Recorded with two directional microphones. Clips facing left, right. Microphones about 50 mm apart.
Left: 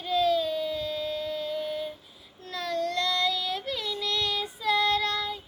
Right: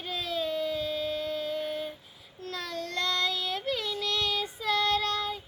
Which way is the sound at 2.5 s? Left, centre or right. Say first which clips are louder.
Left 6 dB; right.